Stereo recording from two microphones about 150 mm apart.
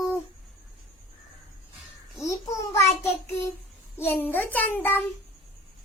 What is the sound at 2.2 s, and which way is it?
Babbling, 20° left (ahead or behind).